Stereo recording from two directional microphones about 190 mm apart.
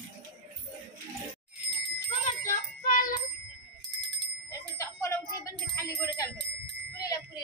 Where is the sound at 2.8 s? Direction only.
45° left (ahead or behind).